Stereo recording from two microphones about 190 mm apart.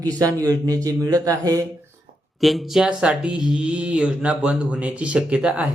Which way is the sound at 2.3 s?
Centre (ahead or behind).